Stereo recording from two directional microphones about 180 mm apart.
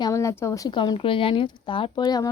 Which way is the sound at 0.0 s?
15° left (ahead or behind).